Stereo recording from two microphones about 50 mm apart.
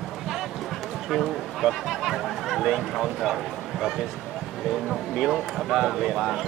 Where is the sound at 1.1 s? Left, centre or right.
Centre.